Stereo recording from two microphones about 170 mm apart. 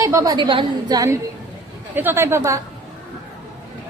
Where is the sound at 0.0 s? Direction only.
20° right (ahead or behind).